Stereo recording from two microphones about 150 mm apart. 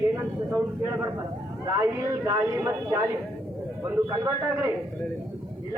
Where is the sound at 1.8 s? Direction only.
20° right (ahead or behind).